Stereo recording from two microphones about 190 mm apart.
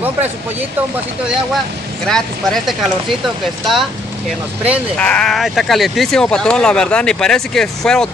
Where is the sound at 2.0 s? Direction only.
Centre (ahead or behind).